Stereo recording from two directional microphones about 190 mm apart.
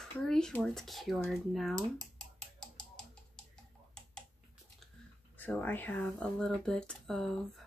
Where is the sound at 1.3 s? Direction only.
Centre (ahead or behind).